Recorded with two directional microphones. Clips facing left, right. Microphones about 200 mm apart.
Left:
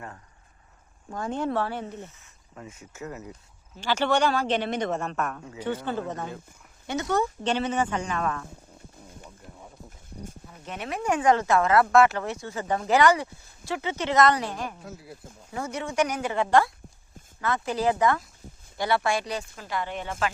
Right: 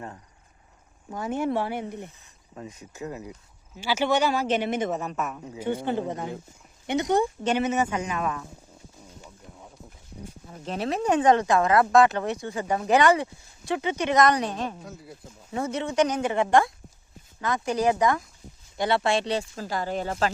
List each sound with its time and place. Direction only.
1.1 s speech: 10° right (ahead or behind)
10.5 s speech: 30° right (ahead or behind)
14.8 s speech: centre (ahead or behind)
15.5 s speech: 25° right (ahead or behind)